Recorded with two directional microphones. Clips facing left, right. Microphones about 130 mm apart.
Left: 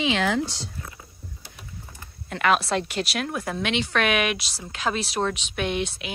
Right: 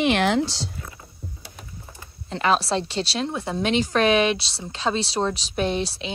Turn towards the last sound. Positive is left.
turn(degrees=-35)  # may be behind; listen again after turning